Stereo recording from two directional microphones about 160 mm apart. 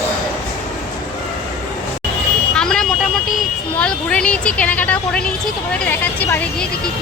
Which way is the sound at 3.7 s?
5° left (ahead or behind).